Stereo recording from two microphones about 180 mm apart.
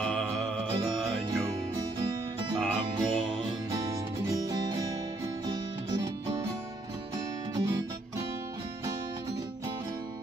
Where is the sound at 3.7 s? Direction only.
20° right (ahead or behind).